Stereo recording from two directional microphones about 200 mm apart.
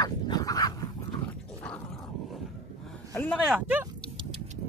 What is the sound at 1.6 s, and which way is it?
Dog, 5° left (ahead or behind).